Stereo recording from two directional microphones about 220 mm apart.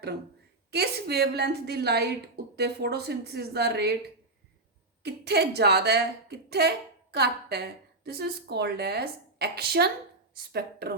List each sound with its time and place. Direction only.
0.7 s a woman's voice: 50° right (ahead or behind)
5.0 s a woman's voice: 50° right (ahead or behind)